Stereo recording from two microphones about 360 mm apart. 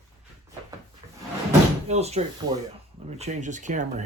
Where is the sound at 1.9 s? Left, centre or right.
Centre.